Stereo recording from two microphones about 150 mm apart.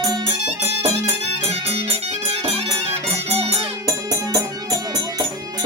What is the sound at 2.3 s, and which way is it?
Music, 40° right (ahead or behind).